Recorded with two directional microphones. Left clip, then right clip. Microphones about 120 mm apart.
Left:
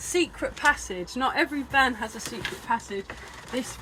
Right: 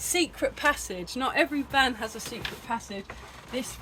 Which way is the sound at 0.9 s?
60° right (ahead or behind).